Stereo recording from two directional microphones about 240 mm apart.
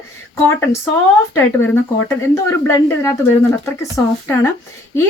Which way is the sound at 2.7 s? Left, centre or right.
Centre.